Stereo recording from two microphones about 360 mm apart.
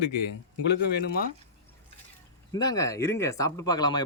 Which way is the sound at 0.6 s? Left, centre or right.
Left.